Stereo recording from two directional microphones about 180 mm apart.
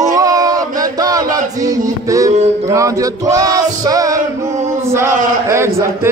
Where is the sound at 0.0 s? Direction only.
20° right (ahead or behind).